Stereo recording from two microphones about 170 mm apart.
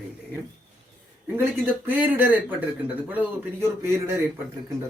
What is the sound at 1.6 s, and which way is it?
Speech, 10° right (ahead or behind).